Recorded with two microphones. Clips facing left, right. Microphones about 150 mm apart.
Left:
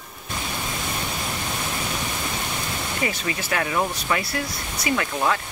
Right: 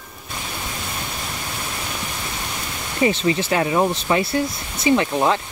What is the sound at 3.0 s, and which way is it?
Speech, 25° right (ahead or behind).